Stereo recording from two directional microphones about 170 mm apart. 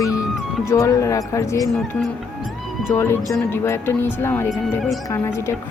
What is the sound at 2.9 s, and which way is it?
Speech, 15° left (ahead or behind).